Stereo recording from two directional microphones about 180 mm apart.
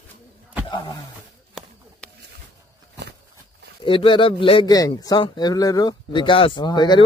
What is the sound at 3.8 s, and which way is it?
A man's voice, 30° left (ahead or behind).